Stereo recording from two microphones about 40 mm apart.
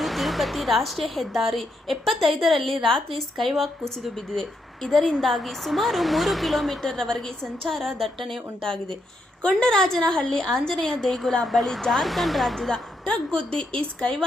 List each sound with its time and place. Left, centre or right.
0.0 s a woman's voice: centre
6.9 s a woman's voice: centre
8.6 s a woman's voice: centre
12.5 s a woman's voice: centre